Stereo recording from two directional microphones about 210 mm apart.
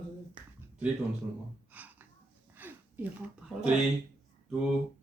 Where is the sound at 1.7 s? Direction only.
10° right (ahead or behind).